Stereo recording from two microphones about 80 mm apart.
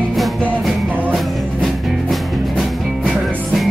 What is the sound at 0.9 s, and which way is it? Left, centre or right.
Music, right.